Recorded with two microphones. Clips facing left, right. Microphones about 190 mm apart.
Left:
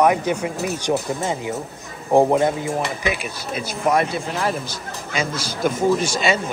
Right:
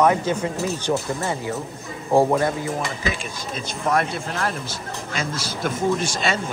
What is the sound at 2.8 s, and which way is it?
A man's voice, 5° left (ahead or behind).